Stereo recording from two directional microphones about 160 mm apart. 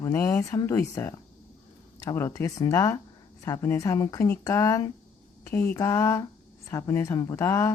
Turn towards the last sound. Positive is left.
turn(degrees=20)  # may be behind; listen again after turning